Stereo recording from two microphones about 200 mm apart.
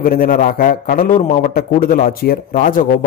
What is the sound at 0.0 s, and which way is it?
A man's voice, 45° left (ahead or behind).